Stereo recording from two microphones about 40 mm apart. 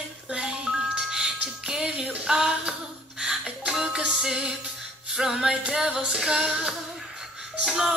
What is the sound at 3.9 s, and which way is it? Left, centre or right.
Music, centre.